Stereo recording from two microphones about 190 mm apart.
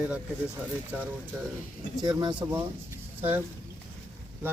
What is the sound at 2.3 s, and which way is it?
Speech, 5° right (ahead or behind).